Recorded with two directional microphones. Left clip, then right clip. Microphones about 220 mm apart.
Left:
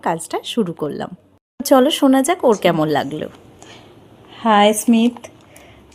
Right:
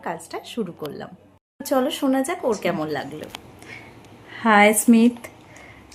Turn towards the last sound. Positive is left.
turn(degrees=10)  # may be behind; listen again after turning